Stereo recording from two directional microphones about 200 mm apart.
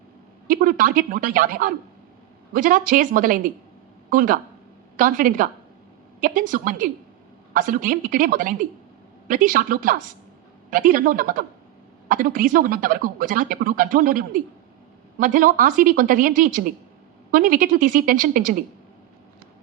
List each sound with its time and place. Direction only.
0.4 s a woman's voice: 45° right (ahead or behind)